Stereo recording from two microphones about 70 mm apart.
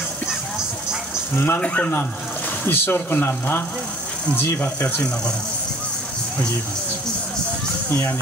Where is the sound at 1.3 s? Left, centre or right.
Left.